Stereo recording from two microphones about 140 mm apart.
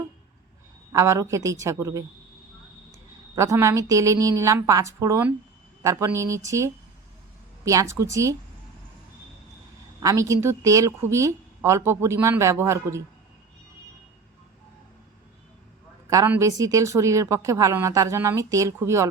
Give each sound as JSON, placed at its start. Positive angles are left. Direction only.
{"t": 0.9, "sound": "a woman's voice", "side_deg": -20}
{"t": 3.3, "sound": "a woman's voice", "side_deg": -20}
{"t": 10.0, "sound": "a woman's voice", "side_deg": -25}
{"t": 16.0, "sound": "a woman's voice", "side_deg": -20}